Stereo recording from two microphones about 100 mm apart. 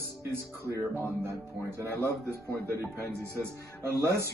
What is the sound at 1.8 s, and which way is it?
Speech, 25° right (ahead or behind).